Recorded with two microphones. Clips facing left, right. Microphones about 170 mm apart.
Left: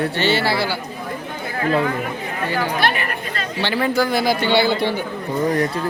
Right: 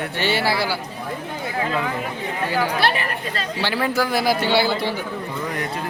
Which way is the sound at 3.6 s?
5° right (ahead or behind).